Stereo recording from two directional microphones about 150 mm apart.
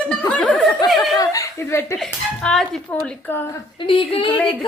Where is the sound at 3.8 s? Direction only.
35° left (ahead or behind).